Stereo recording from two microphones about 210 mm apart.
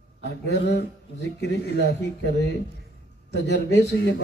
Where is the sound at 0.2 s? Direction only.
55° left (ahead or behind).